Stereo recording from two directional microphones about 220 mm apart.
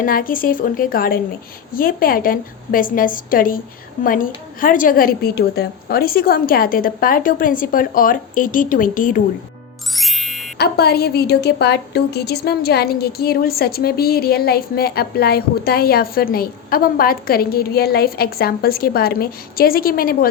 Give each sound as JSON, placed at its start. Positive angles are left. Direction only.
{"t": 0.0, "sound": "a woman's voice", "side_deg": 40}
{"t": 9.9, "sound": "music", "side_deg": 0}
{"t": 10.6, "sound": "a woman's voice", "side_deg": 45}